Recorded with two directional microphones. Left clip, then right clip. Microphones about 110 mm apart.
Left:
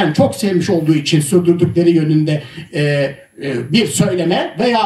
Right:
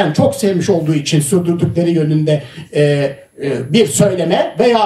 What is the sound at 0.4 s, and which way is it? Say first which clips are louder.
A woman's voice: right 2 dB; 45° right (ahead or behind).